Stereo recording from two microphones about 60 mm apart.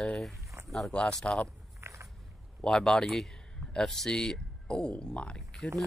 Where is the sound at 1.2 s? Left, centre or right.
Centre.